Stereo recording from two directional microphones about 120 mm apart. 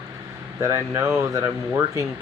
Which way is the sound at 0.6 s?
25° right (ahead or behind).